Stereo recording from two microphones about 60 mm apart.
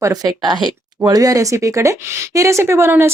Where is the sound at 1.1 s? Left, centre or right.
Right.